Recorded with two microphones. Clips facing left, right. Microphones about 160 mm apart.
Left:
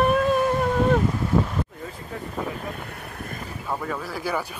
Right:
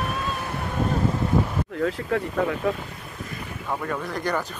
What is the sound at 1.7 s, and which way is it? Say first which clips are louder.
Speech: right 11 dB; 85° right.